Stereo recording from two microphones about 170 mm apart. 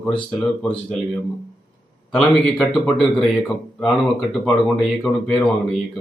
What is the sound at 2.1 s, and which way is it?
A man's voice, centre (ahead or behind).